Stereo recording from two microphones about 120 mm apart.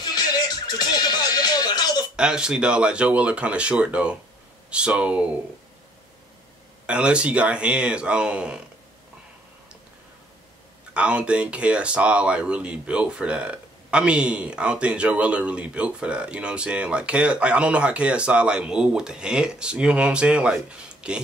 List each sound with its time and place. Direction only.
0.0 s music: 35° left (ahead or behind)
2.1 s speech: 5° right (ahead or behind)
6.9 s speech: 10° right (ahead or behind)
10.9 s speech: 10° right (ahead or behind)